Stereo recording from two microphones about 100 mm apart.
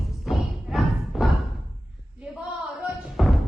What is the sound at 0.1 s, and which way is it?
Thump, centre (ahead or behind).